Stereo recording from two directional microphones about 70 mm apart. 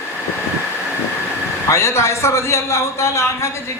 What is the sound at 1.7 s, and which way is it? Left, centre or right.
A man's voice, left.